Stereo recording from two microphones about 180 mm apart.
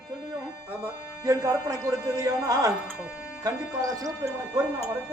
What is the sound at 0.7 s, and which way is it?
Music, 15° right (ahead or behind).